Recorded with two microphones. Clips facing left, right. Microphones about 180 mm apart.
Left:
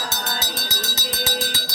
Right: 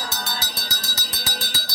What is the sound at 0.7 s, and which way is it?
Music, 20° left (ahead or behind).